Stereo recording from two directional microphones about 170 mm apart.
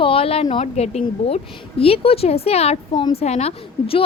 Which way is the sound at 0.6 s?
40° left (ahead or behind).